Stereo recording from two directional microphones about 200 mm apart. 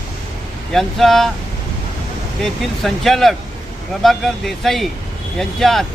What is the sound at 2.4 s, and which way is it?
Speech, centre (ahead or behind).